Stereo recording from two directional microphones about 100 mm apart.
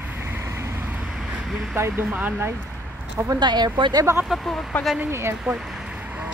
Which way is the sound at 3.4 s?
50° right (ahead or behind).